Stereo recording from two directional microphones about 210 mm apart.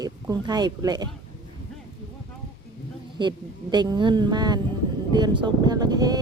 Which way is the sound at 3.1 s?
20° right (ahead or behind).